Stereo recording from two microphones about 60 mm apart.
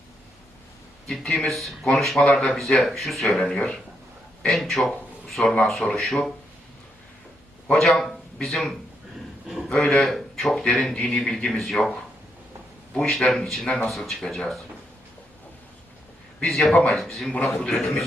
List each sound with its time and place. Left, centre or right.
1.0 s speech: centre
2.2 s speech: centre
2.5 s speech: centre
7.7 s speech: centre
9.9 s speech: centre
13.1 s speech: centre
16.4 s speech: centre
16.7 s speech: centre